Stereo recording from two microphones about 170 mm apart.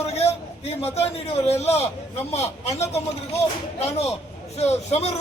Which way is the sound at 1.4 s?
40° left (ahead or behind).